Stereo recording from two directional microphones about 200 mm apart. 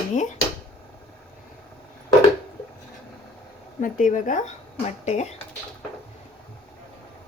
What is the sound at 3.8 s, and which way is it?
Speech, 40° left (ahead or behind).